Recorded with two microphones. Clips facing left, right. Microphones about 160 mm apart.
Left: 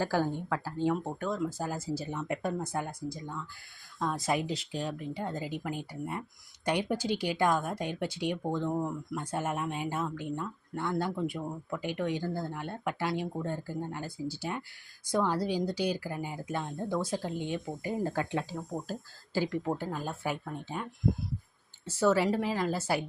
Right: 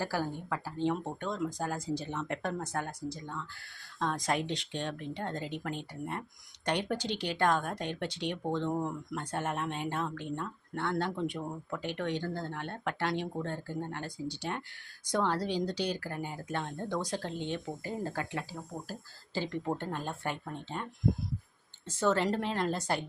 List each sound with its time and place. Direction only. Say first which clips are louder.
0.0 s speech: left 4 dB; 15° left (ahead or behind)
19.3 s speech: left 3 dB; 10° left (ahead or behind)
21.8 s speech: left 3 dB; 10° left (ahead or behind)